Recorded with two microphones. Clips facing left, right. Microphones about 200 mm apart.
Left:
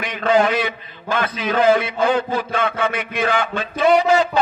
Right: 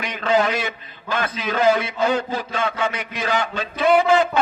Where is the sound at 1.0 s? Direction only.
50° left (ahead or behind).